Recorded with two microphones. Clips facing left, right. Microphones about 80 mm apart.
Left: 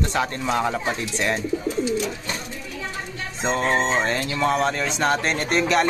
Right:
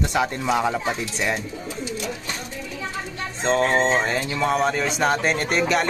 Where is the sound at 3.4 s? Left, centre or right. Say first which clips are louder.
Right 2 dB; centre.